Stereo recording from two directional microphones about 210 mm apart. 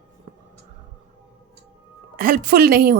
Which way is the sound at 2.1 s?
45° right (ahead or behind).